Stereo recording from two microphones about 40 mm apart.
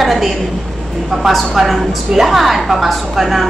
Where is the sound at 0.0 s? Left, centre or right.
Centre.